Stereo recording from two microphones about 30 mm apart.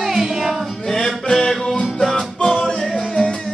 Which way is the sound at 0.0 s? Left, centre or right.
Centre.